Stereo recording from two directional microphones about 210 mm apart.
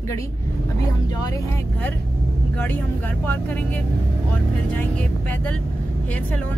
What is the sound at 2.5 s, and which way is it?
Speech, 10° left (ahead or behind).